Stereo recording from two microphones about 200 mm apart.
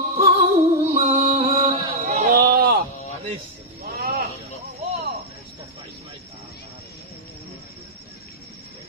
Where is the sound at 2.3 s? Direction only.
50° right (ahead or behind).